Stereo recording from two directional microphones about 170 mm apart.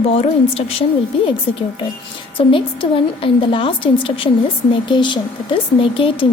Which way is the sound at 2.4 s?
30° left (ahead or behind).